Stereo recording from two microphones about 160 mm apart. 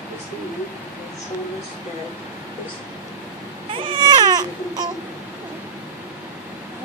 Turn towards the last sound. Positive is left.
turn(degrees=-25)  # may be behind; listen again after turning